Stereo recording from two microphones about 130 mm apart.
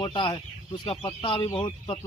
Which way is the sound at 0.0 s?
40° left (ahead or behind).